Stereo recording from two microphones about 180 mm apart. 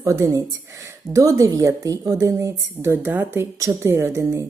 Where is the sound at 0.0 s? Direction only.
15° right (ahead or behind).